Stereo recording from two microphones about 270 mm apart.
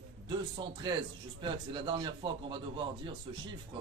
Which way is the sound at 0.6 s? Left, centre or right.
Centre.